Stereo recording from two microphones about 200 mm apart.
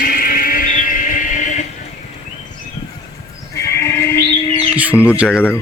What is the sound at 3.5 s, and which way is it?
Sheep, 15° left (ahead or behind).